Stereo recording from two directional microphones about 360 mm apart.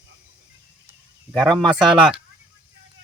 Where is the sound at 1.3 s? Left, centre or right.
Centre.